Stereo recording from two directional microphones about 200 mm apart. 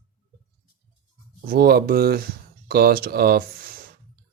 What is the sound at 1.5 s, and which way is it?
Speech, 50° right (ahead or behind).